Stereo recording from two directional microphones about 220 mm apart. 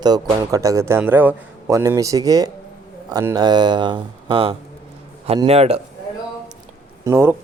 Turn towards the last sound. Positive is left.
turn(degrees=-10)  # may be behind; listen again after turning